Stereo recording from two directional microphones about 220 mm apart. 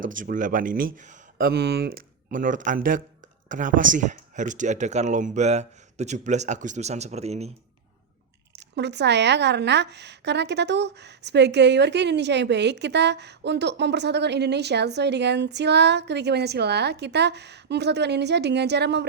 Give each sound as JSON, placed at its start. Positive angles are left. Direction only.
{"t": 0.1, "sound": "speech", "side_deg": -35}
{"t": 8.5, "sound": "a woman's voice", "side_deg": -50}